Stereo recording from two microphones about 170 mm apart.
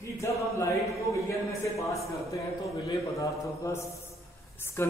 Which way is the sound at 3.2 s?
20° left (ahead or behind).